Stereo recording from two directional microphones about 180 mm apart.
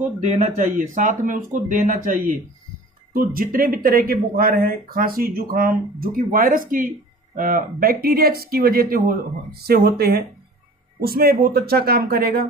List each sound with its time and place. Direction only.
0.0 s speech: 40° right (ahead or behind); by 12.4 s 55° right (ahead or behind)